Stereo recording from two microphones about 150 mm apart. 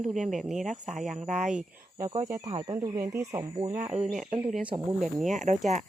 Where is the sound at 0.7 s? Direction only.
55° right (ahead or behind).